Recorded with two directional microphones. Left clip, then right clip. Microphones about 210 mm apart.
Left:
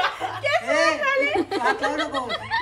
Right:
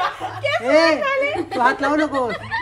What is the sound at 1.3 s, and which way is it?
Speech, 45° left (ahead or behind).